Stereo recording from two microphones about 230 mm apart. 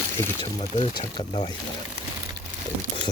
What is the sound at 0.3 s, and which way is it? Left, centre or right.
Speech, left.